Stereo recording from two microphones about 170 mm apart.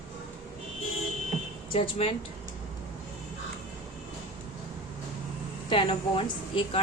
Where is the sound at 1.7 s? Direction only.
35° left (ahead or behind).